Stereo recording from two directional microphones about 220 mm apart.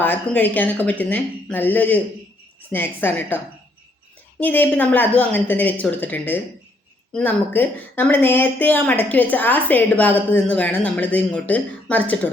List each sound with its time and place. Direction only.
0.0 s speech: 10° left (ahead or behind)